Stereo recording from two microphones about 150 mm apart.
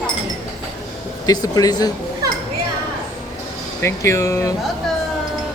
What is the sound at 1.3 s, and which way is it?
Speech, 25° left (ahead or behind).